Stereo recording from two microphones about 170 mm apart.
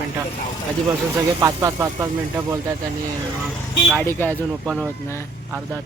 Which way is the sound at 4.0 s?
10° left (ahead or behind).